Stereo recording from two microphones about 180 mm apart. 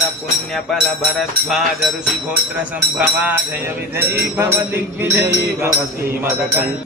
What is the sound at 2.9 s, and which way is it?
Music, 10° right (ahead or behind).